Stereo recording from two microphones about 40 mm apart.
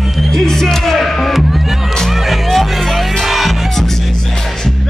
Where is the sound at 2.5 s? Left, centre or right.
Centre.